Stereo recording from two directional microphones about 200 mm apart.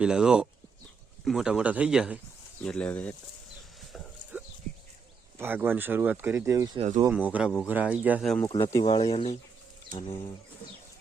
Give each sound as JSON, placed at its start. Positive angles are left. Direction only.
{"t": 0.0, "sound": "a man's voice", "side_deg": -5}
{"t": 3.9, "sound": "a sound", "side_deg": -5}
{"t": 5.4, "sound": "speech", "side_deg": -10}
{"t": 6.7, "sound": "speech", "side_deg": -35}
{"t": 7.1, "sound": "speech", "side_deg": -5}
{"t": 8.4, "sound": "speech", "side_deg": 20}